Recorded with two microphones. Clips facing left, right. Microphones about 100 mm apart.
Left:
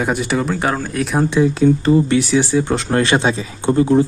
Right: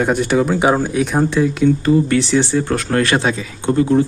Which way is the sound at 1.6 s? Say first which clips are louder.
Even; 25° left (ahead or behind).